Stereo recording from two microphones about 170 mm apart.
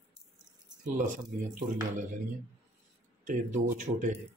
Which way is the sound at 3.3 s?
45° right (ahead or behind).